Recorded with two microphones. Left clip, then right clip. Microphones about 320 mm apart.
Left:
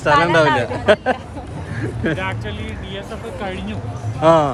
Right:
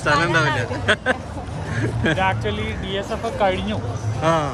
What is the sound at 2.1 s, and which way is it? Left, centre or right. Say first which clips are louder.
Speech: right 4 dB; right.